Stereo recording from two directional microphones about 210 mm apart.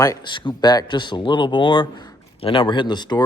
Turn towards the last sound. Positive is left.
turn(degrees=20)  # may be behind; listen again after turning